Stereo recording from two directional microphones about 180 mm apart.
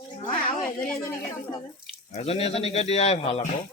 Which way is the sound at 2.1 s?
35° left (ahead or behind).